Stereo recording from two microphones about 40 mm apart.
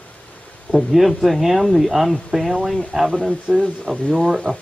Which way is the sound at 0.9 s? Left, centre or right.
Centre.